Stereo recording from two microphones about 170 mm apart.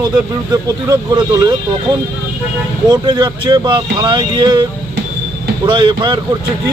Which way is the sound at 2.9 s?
25° right (ahead or behind).